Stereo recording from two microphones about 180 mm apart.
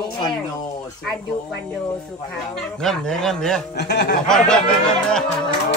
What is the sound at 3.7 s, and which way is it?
Speech, 70° left (ahead or behind).